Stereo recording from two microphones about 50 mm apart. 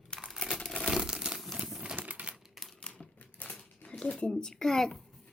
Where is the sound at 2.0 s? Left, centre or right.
Right.